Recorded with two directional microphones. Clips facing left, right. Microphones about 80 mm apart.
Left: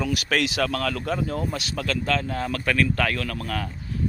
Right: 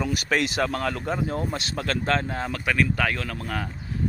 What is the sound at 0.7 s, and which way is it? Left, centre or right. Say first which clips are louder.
Speech: left 1 dB; right.